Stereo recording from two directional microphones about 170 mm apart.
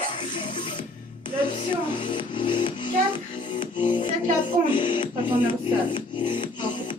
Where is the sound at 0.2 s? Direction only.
30° left (ahead or behind).